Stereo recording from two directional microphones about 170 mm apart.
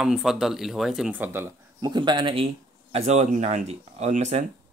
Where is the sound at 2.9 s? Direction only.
40° right (ahead or behind).